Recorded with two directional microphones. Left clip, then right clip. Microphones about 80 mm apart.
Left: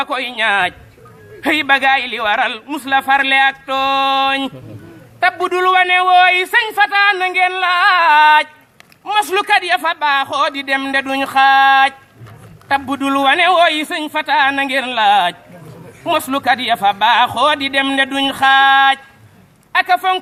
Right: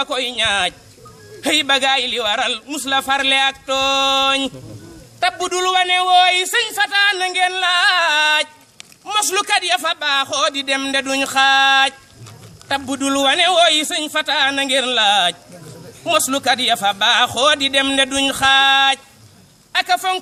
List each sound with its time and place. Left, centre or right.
0.0 s a man's voice: right